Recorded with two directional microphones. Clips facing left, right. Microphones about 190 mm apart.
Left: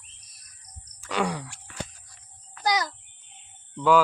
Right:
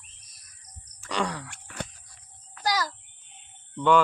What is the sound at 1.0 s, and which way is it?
Groan, 5° left (ahead or behind).